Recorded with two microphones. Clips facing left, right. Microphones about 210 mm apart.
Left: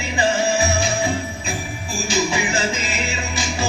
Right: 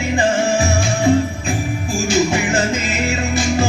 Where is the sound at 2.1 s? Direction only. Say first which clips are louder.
Right 4 dB; 50° right (ahead or behind).